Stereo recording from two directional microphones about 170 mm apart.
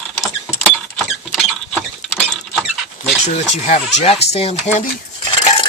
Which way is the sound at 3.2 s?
40° left (ahead or behind).